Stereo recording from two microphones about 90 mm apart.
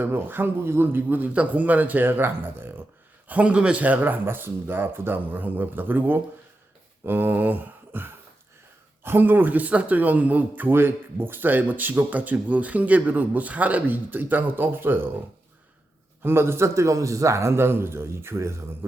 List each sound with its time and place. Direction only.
0.0 s speech: 25° right (ahead or behind)
16.2 s speech: 25° right (ahead or behind)